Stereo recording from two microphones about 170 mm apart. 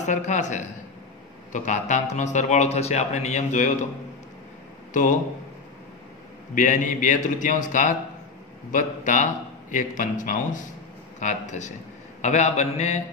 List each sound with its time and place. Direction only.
0.0 s a man's voice: 45° left (ahead or behind)
4.9 s a man's voice: 50° left (ahead or behind)
6.5 s a man's voice: 50° left (ahead or behind)